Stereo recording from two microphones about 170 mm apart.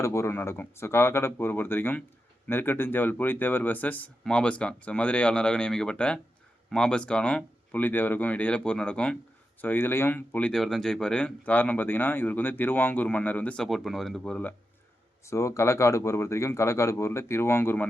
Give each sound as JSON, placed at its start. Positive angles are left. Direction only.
{"t": 0.0, "sound": "speech", "side_deg": 15}
{"t": 15.2, "sound": "speech", "side_deg": 15}